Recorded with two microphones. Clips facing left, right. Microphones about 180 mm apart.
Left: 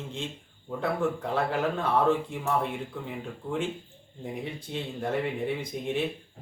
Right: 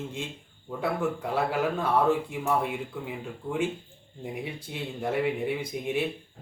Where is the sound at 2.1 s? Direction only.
5° right (ahead or behind).